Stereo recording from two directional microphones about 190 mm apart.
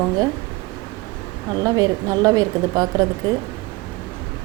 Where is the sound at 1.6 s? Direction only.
20° right (ahead or behind).